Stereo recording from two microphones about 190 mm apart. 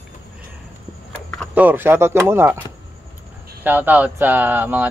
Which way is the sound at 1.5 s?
10° right (ahead or behind).